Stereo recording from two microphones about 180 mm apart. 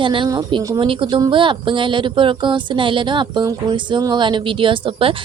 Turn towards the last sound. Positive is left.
turn(degrees=-30)  # may be behind; listen again after turning